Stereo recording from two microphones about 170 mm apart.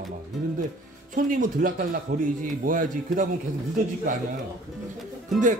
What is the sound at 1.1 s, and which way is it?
Speech, 50° right (ahead or behind).